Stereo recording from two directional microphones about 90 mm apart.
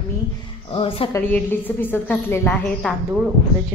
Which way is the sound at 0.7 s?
90° left.